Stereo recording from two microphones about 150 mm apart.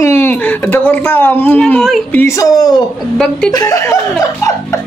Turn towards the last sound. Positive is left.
turn(degrees=20)  # may be behind; listen again after turning